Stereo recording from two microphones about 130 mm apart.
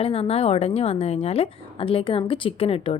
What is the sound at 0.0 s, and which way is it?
A woman's voice, 50° left (ahead or behind).